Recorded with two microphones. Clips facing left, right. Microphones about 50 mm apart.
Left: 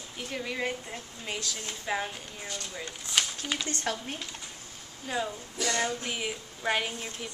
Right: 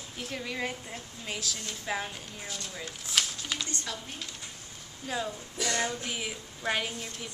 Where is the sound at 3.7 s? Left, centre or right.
Left.